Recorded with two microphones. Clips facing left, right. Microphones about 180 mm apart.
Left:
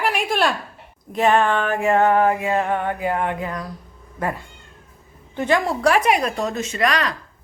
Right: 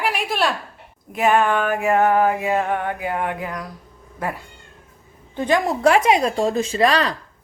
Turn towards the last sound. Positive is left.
turn(degrees=-30)  # may be behind; listen again after turning